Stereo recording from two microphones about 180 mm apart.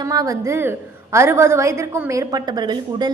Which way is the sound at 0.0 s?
20° right (ahead or behind).